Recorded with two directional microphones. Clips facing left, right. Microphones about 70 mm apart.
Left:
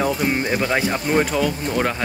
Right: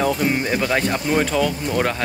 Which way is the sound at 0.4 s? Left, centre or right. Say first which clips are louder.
Even; centre.